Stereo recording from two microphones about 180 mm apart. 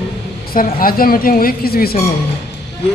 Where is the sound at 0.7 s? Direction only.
55° left (ahead or behind).